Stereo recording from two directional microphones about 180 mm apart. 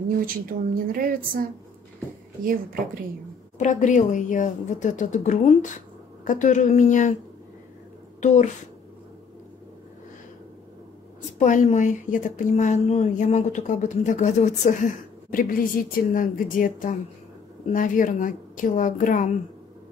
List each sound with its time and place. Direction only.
0.3 s a woman's voice: 50° right (ahead or behind)
3.5 s a woman's voice: 45° left (ahead or behind)
8.2 s a woman's voice: 40° left (ahead or behind)
11.3 s a woman's voice: 45° left (ahead or behind)